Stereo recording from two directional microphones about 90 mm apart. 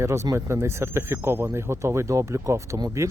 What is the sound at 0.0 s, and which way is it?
Speech, 35° right (ahead or behind).